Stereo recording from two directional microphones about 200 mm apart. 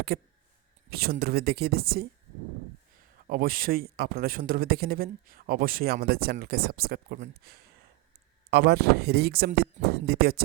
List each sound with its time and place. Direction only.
0.1 s a man's voice: 50° right (ahead or behind)
3.2 s a man's voice: 45° right (ahead or behind)